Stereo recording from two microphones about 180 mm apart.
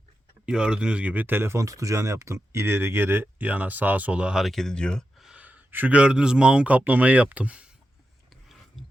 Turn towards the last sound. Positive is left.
turn(degrees=-5)  # may be behind; listen again after turning